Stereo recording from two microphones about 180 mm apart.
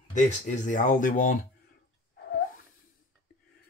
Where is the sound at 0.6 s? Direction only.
45° left (ahead or behind).